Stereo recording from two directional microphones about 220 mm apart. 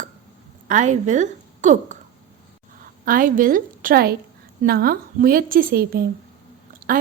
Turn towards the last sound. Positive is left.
turn(degrees=-40)  # may be behind; listen again after turning